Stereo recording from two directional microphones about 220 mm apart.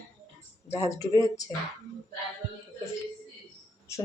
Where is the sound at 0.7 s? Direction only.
15° left (ahead or behind).